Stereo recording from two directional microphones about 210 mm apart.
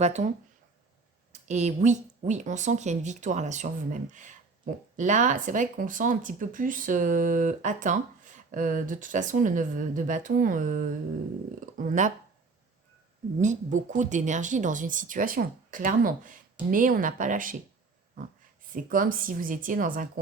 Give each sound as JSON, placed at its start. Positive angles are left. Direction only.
{"t": 0.0, "sound": "speech", "side_deg": -35}
{"t": 13.4, "sound": "speech", "side_deg": -35}
{"t": 18.7, "sound": "speech", "side_deg": -40}